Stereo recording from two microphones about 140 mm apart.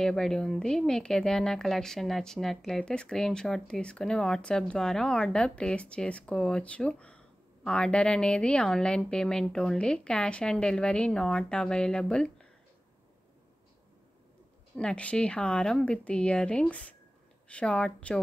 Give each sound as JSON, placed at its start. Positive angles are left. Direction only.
{"t": 0.0, "sound": "speech", "side_deg": 5}
{"t": 14.8, "sound": "speech", "side_deg": 10}